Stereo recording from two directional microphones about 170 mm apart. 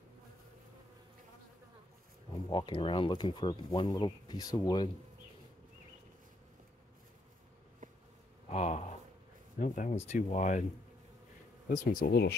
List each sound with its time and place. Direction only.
2.5 s speech: 30° left (ahead or behind)
8.5 s a sound: 40° left (ahead or behind)
9.6 s speech: 45° left (ahead or behind)
11.7 s speech: 55° left (ahead or behind)